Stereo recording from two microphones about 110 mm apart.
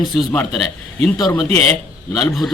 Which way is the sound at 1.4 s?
70° right (ahead or behind).